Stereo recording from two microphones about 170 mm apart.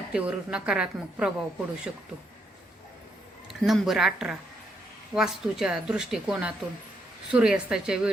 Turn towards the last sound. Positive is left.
turn(degrees=-5)  # may be behind; listen again after turning